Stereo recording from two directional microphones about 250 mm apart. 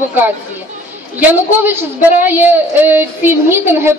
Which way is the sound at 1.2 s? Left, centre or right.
Centre.